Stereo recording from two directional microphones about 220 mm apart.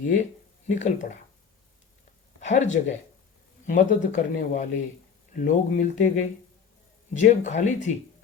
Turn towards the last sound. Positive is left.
turn(degrees=35)  # may be behind; listen again after turning